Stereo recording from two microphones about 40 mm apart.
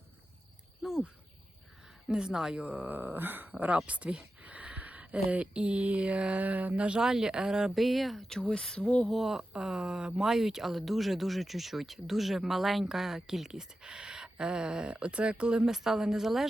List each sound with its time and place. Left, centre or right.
0.8 s cricket: centre
2.0 s a woman's voice: right
2.6 s a sound: right
2.8 s a sound: right
3.8 s a sound: right
7.0 s speech: centre
7.8 s speech: centre
8.3 s speech: centre
9.2 s speech: centre
15.7 s speech: centre